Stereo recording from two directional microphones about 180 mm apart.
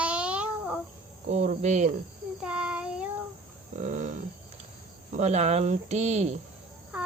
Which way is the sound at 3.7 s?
45° right (ahead or behind).